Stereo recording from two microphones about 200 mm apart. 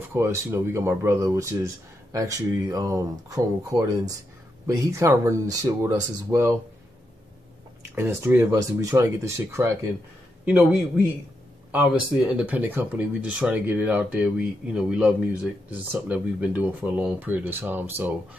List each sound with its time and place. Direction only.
0.1 s speech: 15° right (ahead or behind)
7.9 s speech: 10° right (ahead or behind)